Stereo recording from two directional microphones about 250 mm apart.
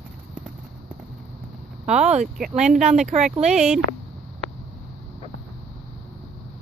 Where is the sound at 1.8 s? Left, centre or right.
Right.